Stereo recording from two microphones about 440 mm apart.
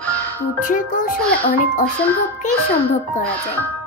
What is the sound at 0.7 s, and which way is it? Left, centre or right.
Music, centre.